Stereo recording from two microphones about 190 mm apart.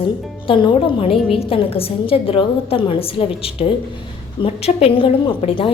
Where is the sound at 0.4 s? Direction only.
25° left (ahead or behind).